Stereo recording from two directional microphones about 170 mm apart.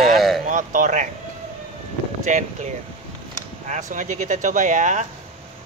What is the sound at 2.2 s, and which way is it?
Speech, 45° right (ahead or behind).